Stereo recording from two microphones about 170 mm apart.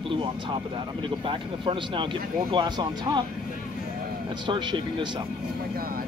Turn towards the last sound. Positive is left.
turn(degrees=-25)  # may be behind; listen again after turning